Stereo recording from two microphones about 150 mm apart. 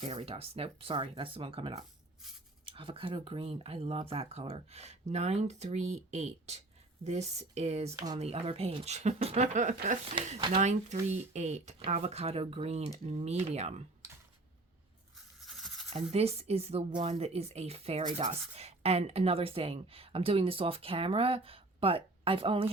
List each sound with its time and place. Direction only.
0.0 s speech: 40° right (ahead or behind)
7.9 s speech: 25° right (ahead or behind)
8.2 s speech: 40° right (ahead or behind)
15.4 s a sound: centre (ahead or behind)
16.1 s speech: 45° right (ahead or behind)